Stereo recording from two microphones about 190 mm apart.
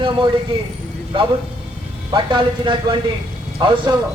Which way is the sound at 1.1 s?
25° right (ahead or behind).